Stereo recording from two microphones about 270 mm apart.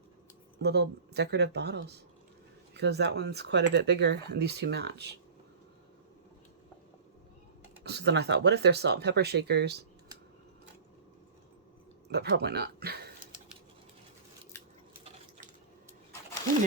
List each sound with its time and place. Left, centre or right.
0.6 s speech: right
7.9 s speech: right
12.0 s speech: right